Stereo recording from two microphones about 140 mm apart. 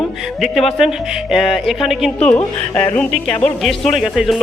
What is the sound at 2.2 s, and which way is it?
Speech, 10° left (ahead or behind).